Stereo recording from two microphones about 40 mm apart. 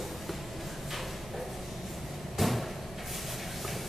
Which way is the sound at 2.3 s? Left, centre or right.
Centre.